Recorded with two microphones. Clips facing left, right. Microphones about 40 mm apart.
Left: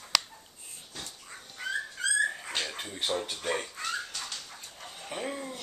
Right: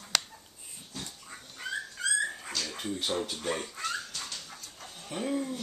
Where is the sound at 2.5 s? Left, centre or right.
Left.